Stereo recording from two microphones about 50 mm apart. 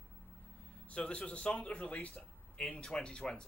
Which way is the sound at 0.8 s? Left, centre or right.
Left.